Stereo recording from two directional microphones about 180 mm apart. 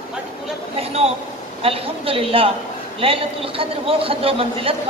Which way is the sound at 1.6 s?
30° right (ahead or behind).